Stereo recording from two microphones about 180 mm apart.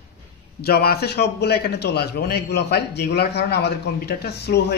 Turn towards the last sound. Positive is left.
turn(degrees=65)  # may be behind; listen again after turning